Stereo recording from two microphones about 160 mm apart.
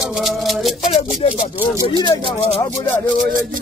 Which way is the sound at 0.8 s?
45° left (ahead or behind).